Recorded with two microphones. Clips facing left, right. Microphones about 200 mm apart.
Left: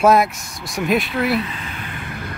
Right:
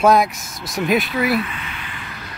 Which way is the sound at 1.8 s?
55° left (ahead or behind).